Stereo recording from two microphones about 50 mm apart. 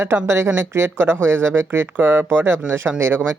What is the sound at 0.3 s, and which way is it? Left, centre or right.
Speech, right.